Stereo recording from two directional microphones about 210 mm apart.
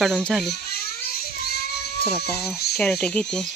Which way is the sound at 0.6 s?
50° left (ahead or behind).